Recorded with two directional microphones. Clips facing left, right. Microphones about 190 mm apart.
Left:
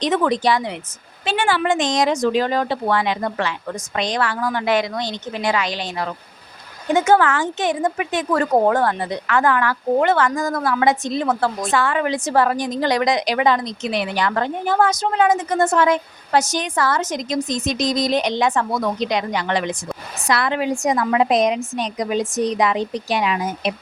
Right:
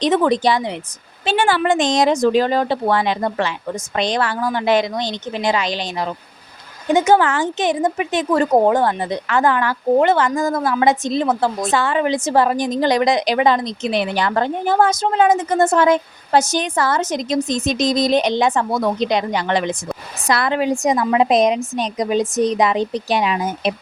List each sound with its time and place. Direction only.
0.0 s speech: 30° right (ahead or behind)
1.2 s speech: 35° right (ahead or behind)
20.2 s a woman's voice: 40° right (ahead or behind)
20.8 s speech: 20° right (ahead or behind)